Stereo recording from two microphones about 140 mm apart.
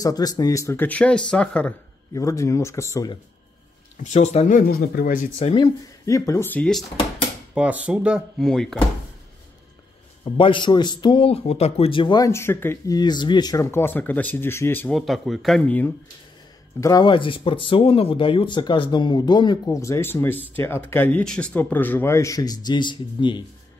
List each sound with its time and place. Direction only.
0.0 s speech: 25° left (ahead or behind); by 1.7 s 5° left (ahead or behind)
2.1 s speech: 20° left (ahead or behind)
4.0 s speech: 55° left (ahead or behind)
4.5 s speech: 80° left
5.4 s speech: 40° left (ahead or behind)
6.0 s speech: 25° left (ahead or behind)
6.5 s speech: 10° left (ahead or behind)
7.5 s speech: 10° right (ahead or behind)
10.2 s speech: 35° left (ahead or behind)
12.2 s speech: 20° left (ahead or behind)
14.9 s speech: centre (ahead or behind)
16.8 s speech: 30° left (ahead or behind)